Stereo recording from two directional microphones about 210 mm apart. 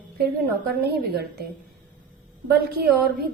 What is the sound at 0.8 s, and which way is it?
Speech, 50° right (ahead or behind).